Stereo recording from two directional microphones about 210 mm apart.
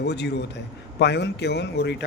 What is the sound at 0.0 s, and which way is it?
A man's voice, 55° left (ahead or behind).